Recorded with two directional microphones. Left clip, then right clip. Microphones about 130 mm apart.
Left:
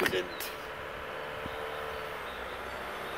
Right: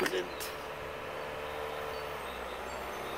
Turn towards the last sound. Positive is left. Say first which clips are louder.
# left 1 dB
turn(degrees=-5)  # may be behind; listen again after turning